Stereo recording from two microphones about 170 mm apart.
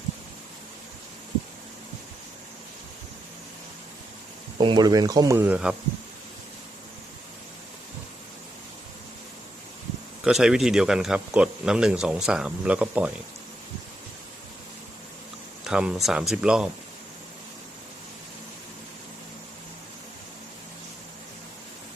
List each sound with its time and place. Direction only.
4.5 s speech: 25° right (ahead or behind); by 5.7 s 10° right (ahead or behind)
10.2 s speech: 5° right (ahead or behind)
15.6 s speech: 5° right (ahead or behind)